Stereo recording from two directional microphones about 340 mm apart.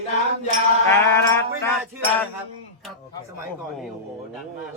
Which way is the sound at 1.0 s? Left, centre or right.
Centre.